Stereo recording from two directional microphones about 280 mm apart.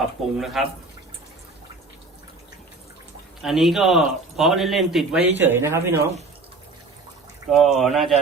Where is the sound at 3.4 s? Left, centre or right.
Centre.